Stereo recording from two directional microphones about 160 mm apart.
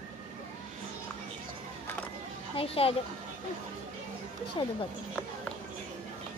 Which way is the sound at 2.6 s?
35° left (ahead or behind).